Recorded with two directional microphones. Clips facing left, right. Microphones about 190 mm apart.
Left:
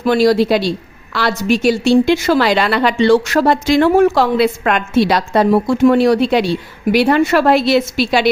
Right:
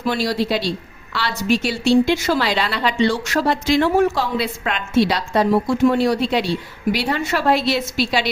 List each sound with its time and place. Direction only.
0.0 s a woman's voice: 55° left (ahead or behind)
2.0 s a woman's voice: 65° left (ahead or behind)